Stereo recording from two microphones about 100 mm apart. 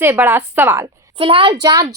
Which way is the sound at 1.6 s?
40° right (ahead or behind).